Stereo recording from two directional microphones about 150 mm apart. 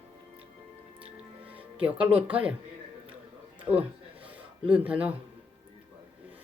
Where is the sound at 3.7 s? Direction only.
35° right (ahead or behind).